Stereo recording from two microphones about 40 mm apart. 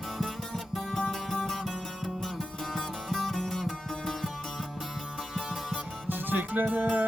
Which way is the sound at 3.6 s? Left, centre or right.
Centre.